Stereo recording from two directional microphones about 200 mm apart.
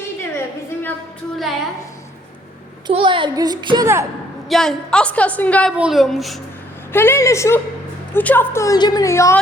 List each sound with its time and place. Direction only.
0.3 s a sound: 10° left (ahead or behind)
2.8 s a child's voice: 25° right (ahead or behind)
4.4 s a woman's voice: centre (ahead or behind)
6.9 s a woman's voice: 10° left (ahead or behind)